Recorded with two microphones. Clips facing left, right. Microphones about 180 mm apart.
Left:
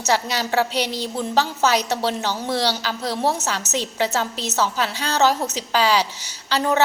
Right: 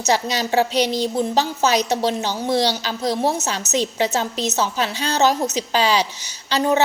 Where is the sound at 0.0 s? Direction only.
20° right (ahead or behind).